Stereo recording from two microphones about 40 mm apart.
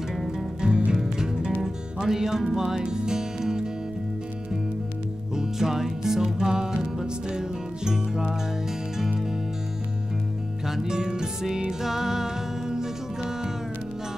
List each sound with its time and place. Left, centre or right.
0.6 s music: right
5.3 s music: centre
10.7 s music: centre